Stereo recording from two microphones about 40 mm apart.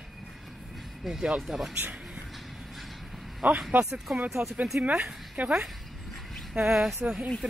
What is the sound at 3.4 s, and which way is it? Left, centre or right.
A woman's voice, right.